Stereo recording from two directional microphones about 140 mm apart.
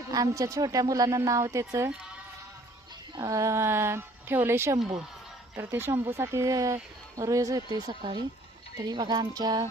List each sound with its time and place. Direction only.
0.1 s speech: 25° right (ahead or behind)
3.2 s speech: 25° right (ahead or behind)